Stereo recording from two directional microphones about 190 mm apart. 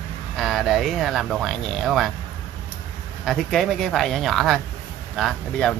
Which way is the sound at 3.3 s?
Centre (ahead or behind).